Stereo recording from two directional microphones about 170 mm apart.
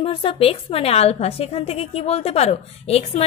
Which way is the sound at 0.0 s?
30° left (ahead or behind).